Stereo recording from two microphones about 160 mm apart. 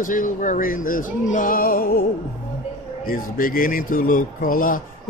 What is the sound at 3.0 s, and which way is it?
Speech, 65° left (ahead or behind).